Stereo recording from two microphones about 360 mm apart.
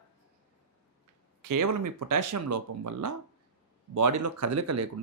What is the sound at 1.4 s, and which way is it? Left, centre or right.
Speech, right.